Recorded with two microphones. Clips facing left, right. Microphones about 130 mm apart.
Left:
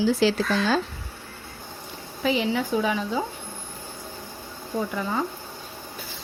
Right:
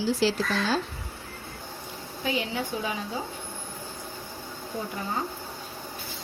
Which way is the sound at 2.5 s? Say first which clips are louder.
Left 7 dB; 80° left.